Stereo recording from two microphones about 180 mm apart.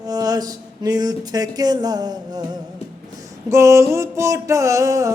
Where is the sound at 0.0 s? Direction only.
20° right (ahead or behind).